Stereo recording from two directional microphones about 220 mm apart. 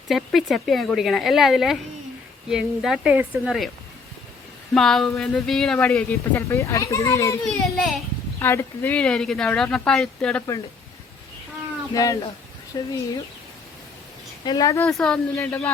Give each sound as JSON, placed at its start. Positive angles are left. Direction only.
{"t": 0.3, "sound": "speech", "side_deg": 0}
{"t": 4.7, "sound": "speech", "side_deg": 0}
{"t": 7.4, "sound": "speech", "side_deg": 0}
{"t": 8.4, "sound": "speech", "side_deg": 10}
{"t": 11.9, "sound": "a woman's voice", "side_deg": 15}
{"t": 14.4, "sound": "a woman's voice", "side_deg": 15}
{"t": 14.8, "sound": "speech", "side_deg": 5}